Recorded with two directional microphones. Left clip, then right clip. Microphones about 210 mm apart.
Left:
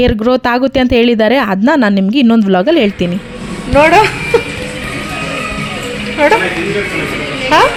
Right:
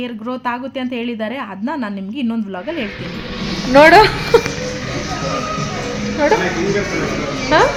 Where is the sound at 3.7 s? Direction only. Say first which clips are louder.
Even; 5° right (ahead or behind).